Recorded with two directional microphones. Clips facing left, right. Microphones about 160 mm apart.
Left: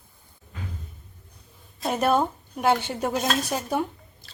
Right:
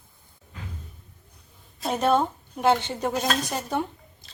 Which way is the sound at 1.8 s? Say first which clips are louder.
Even; 10° left (ahead or behind).